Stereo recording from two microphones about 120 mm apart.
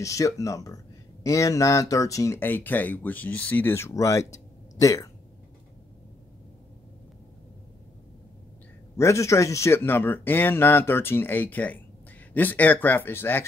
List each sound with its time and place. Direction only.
0.0 s speech: 25° left (ahead or behind)
8.9 s speech: 25° left (ahead or behind)